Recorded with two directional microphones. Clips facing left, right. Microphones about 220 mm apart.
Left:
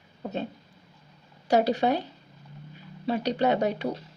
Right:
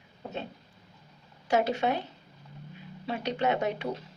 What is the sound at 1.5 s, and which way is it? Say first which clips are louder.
Speech: left 4 dB; 35° left (ahead or behind).